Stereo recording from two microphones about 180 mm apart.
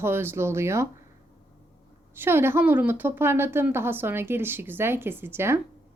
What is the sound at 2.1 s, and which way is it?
A woman's voice, 10° right (ahead or behind).